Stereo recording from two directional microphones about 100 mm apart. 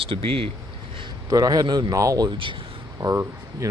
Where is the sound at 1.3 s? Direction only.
35° right (ahead or behind).